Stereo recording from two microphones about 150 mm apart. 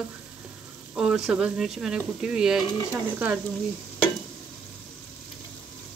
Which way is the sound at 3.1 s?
10° right (ahead or behind).